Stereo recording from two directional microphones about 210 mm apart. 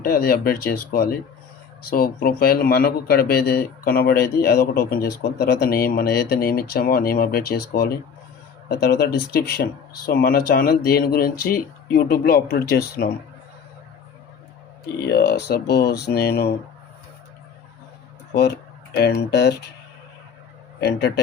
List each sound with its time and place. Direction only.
0.0 s speech: 45° left (ahead or behind)
14.9 s speech: 50° left (ahead or behind)
19.3 s speech: 50° left (ahead or behind)